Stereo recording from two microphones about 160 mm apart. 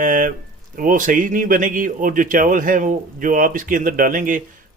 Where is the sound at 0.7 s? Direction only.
55° right (ahead or behind).